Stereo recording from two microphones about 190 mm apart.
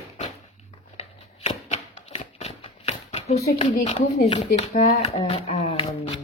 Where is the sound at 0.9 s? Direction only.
35° left (ahead or behind).